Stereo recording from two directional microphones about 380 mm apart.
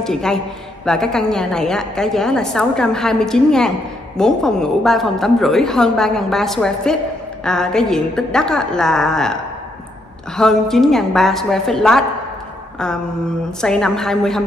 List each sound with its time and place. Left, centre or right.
0.0 s a woman's voice: centre
12.7 s a sound: centre
13.6 s a woman's voice: centre